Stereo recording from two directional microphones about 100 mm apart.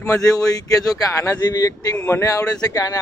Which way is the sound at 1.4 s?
40° left (ahead or behind).